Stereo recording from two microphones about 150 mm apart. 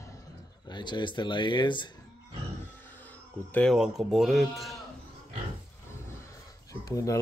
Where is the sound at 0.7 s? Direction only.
30° left (ahead or behind).